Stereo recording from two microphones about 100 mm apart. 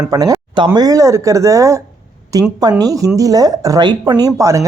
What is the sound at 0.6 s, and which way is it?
Speech, 40° right (ahead or behind).